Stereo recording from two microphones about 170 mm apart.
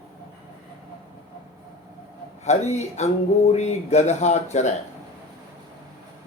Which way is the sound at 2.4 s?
40° left (ahead or behind).